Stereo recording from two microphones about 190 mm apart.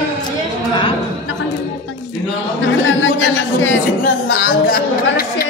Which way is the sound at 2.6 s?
85° left.